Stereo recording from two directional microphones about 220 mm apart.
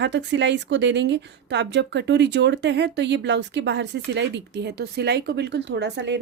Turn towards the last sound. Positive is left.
turn(degrees=-50)  # may be behind; listen again after turning